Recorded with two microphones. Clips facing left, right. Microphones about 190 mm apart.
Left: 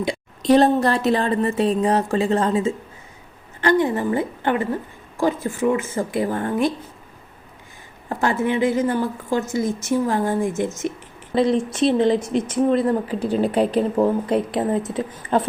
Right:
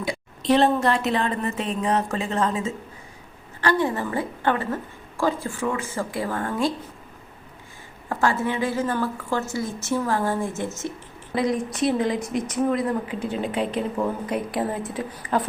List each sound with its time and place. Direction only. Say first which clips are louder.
0.4 s a woman's voice: left 4 dB; 40° left (ahead or behind)
3.6 s speech: left 4 dB; 20° left (ahead or behind)
8.2 s a woman's voice: left 4 dB; 20° left (ahead or behind)
11.3 s speech: left 5 dB; 30° left (ahead or behind)